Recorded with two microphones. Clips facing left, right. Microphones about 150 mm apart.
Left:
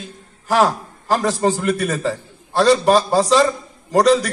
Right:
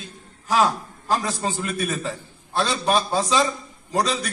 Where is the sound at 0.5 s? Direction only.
75° left (ahead or behind).